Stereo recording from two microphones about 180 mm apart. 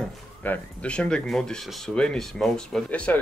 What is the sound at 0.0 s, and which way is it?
Speech, 10° left (ahead or behind).